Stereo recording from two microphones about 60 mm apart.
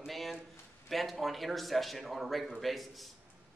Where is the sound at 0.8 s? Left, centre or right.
Centre.